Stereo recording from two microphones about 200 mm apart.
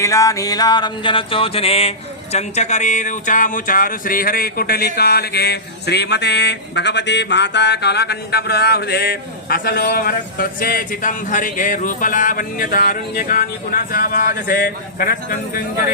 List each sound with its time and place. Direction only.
0.0 s music: 15° left (ahead or behind)
2.3 s speech: 35° left (ahead or behind)